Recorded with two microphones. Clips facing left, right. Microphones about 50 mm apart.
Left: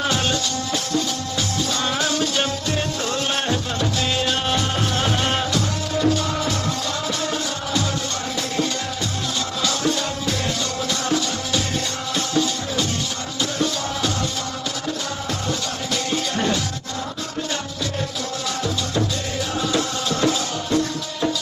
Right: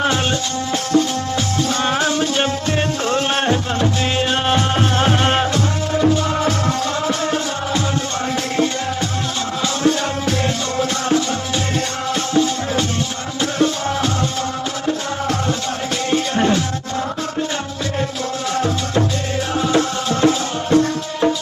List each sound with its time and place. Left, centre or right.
0.0 s music: right
9.8 s music: right
16.0 s music: right
19.5 s music: right